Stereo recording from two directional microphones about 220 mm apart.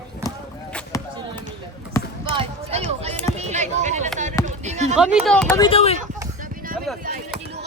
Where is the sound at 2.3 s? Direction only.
25° right (ahead or behind).